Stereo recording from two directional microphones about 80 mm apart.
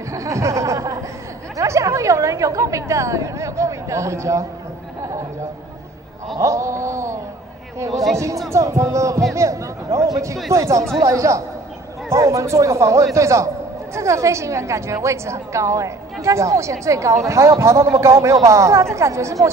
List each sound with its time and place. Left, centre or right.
0.1 s a sound: right
1.6 s a woman's voice: right
6.4 s a woman's voice: right
7.9 s speech: centre
8.5 s a woman's voice: right